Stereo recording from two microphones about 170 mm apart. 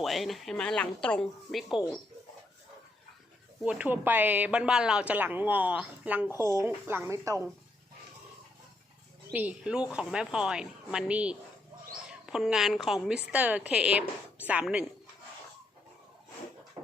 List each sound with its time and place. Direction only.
0.0 s a woman's voice: centre (ahead or behind)
3.6 s a woman's voice: 5° right (ahead or behind)
9.3 s a woman's voice: 10° right (ahead or behind)
16.8 s dog: 20° right (ahead or behind)